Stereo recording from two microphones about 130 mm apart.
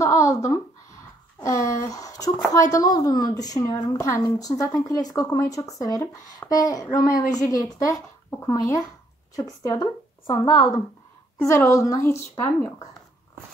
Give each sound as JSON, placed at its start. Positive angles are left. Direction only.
{"t": 0.0, "sound": "a sound", "side_deg": 25}
{"t": 2.5, "sound": "a woman's voice", "side_deg": 25}
{"t": 10.4, "sound": "a woman's voice", "side_deg": 35}
{"t": 11.3, "sound": "a woman's voice", "side_deg": 20}